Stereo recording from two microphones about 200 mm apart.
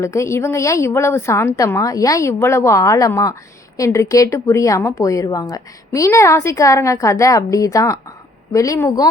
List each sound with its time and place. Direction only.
0.0 s a woman's voice: 15° left (ahead or behind)